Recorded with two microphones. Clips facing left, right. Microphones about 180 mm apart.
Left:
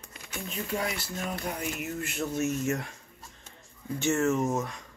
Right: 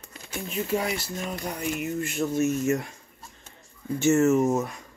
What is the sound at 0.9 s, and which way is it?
Speech, 15° right (ahead or behind).